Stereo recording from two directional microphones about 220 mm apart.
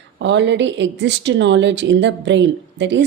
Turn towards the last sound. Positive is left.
turn(degrees=-55)  # may be behind; listen again after turning